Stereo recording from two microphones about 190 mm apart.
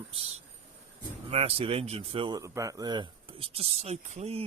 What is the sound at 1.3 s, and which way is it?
Speech, 30° right (ahead or behind).